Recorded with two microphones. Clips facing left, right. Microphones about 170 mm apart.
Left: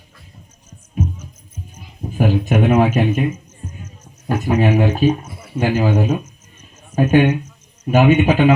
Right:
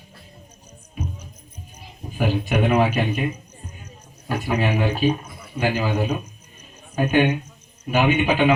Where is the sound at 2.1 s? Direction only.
45° left (ahead or behind).